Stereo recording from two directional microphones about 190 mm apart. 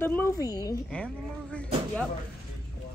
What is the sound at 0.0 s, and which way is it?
Speech, 10° left (ahead or behind).